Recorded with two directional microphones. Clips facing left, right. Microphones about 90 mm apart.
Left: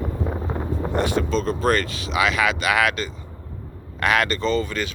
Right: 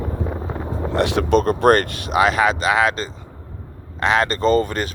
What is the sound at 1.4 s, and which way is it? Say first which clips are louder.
Speech: right 7 dB; 55° right (ahead or behind).